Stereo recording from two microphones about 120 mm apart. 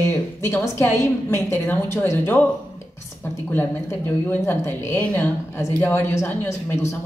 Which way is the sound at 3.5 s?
15° left (ahead or behind).